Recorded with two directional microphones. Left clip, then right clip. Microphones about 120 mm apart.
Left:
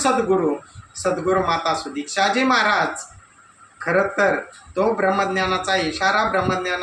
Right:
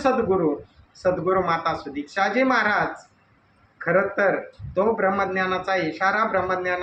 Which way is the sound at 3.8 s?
25° left (ahead or behind).